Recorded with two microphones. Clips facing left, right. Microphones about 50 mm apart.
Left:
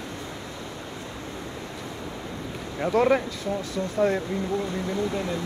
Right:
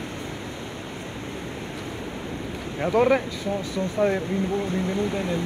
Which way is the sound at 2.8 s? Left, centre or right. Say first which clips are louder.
Right 1 dB; centre.